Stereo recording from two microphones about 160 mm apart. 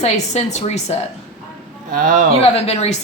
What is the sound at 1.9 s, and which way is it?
Speech, 55° right (ahead or behind).